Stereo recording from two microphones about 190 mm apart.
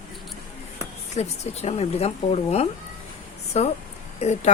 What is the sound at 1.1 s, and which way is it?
Speech, 35° left (ahead or behind).